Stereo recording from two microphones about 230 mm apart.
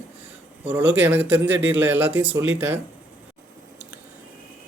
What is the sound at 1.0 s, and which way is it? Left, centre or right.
A man's voice, centre.